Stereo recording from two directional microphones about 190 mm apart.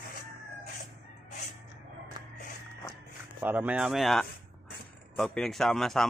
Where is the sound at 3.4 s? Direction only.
10° right (ahead or behind).